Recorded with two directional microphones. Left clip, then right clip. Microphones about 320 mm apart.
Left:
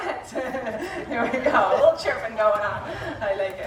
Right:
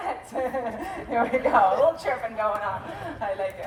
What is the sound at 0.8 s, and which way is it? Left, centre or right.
A woman's voice, centre.